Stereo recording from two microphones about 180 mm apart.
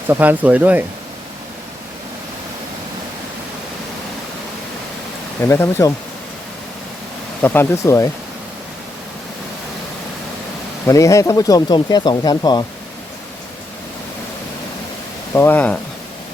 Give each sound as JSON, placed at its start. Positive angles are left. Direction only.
{"t": 0.1, "sound": "speech", "side_deg": -10}
{"t": 5.4, "sound": "speech", "side_deg": 15}
{"t": 7.4, "sound": "speech", "side_deg": 10}
{"t": 10.8, "sound": "speech", "side_deg": 15}
{"t": 15.4, "sound": "speech", "side_deg": 10}